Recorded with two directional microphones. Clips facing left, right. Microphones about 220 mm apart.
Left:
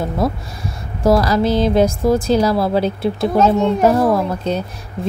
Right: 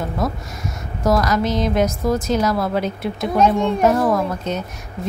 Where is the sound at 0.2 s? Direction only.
30° left (ahead or behind).